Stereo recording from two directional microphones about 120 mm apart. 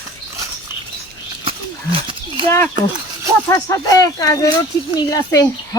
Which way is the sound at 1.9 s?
45° right (ahead or behind).